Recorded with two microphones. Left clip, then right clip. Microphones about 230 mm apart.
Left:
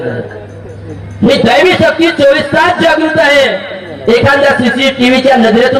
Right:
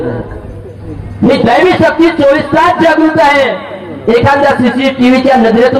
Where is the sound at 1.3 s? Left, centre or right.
Left.